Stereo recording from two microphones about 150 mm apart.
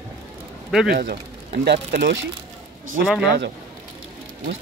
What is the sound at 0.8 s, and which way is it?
Speech, 90° right.